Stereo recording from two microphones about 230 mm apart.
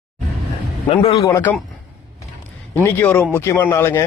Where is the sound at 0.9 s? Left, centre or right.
Left.